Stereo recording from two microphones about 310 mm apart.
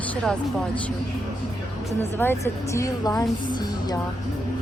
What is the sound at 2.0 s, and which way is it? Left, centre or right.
A woman's voice, centre.